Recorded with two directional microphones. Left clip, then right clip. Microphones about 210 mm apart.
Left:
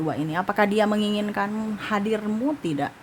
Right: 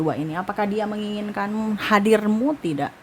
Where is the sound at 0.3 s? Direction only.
Centre (ahead or behind).